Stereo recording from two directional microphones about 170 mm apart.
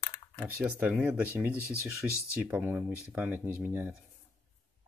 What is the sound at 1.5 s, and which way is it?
Sanding, 15° left (ahead or behind).